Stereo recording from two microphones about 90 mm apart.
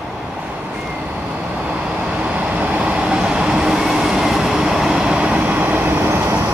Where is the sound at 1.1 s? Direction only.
10° right (ahead or behind).